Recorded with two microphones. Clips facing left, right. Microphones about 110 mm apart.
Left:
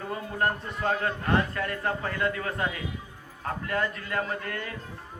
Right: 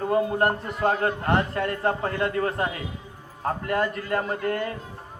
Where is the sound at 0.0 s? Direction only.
30° right (ahead or behind).